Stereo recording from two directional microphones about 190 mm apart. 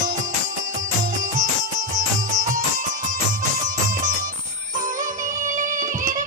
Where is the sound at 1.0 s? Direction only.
40° right (ahead or behind).